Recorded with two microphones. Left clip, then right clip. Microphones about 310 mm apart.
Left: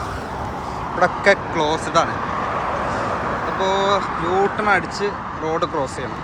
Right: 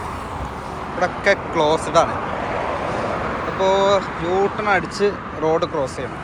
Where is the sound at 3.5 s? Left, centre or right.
Centre.